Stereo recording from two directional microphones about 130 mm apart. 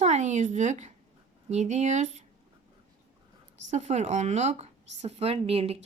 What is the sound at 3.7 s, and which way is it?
Speech, 60° right (ahead or behind).